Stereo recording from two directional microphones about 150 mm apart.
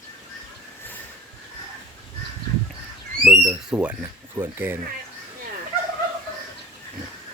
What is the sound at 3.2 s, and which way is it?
Speech, 5° right (ahead or behind).